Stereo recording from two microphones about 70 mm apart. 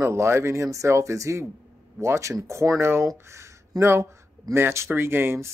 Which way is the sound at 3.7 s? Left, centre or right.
Right.